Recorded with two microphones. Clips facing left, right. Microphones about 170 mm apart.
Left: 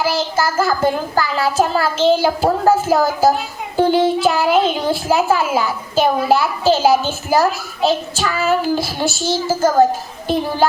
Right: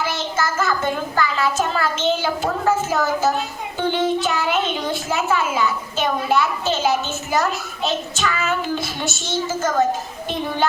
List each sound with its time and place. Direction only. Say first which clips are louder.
0.0 s a child's voice: left 5 dB; 30° left (ahead or behind)